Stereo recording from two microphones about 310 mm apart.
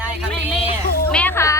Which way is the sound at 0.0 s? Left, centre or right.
Centre.